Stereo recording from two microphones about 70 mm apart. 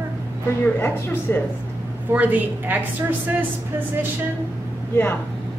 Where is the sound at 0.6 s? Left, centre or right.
Left.